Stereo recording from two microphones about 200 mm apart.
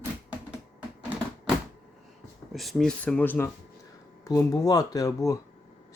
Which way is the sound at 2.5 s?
Centre (ahead or behind).